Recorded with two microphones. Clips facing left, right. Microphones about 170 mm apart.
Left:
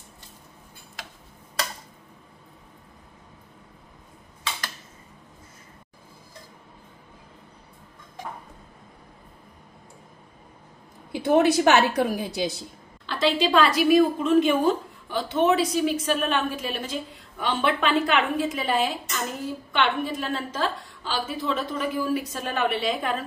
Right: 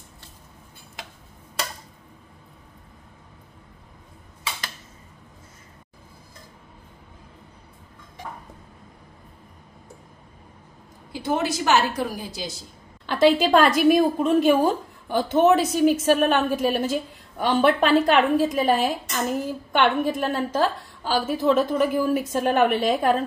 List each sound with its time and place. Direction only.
11.1 s a woman's voice: 60° left (ahead or behind)
13.0 s a woman's voice: 50° right (ahead or behind)